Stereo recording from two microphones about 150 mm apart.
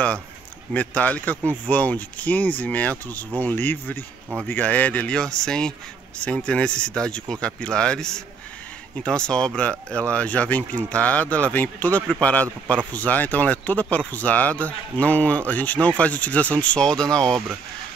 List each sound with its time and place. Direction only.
0.7 s speech: 10° left (ahead or behind)